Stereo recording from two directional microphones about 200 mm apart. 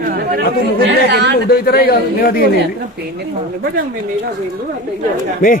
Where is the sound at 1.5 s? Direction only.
50° left (ahead or behind).